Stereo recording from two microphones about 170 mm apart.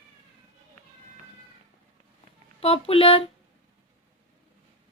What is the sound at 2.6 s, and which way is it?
Speech, 35° left (ahead or behind).